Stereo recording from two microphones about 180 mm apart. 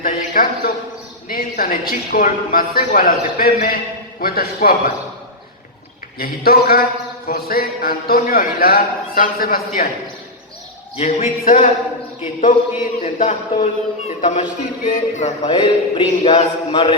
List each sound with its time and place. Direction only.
0.0 s a man's voice: 50° left (ahead or behind)
6.1 s a man's voice: 55° left (ahead or behind)
10.9 s a sound: 35° left (ahead or behind)
12.2 s a man's voice: 45° left (ahead or behind)
14.2 s a sound: 40° left (ahead or behind)
14.8 s a man's voice: 40° left (ahead or behind)
15.4 s speech: 30° left (ahead or behind)